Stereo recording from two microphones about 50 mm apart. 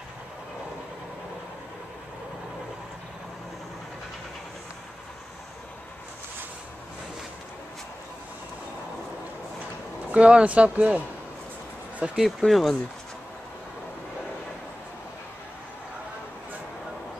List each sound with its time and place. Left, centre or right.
10.1 s speech: right
12.2 s speech: centre